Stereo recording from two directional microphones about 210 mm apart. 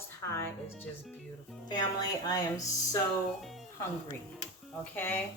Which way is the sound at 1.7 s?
20° left (ahead or behind).